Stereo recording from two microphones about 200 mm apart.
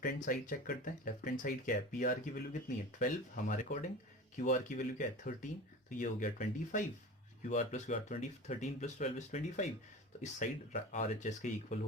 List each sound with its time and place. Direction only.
0.0 s speech: 45° left (ahead or behind)